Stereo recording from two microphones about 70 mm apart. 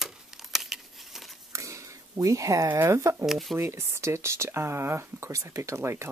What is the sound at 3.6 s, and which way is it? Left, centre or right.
Speech, right.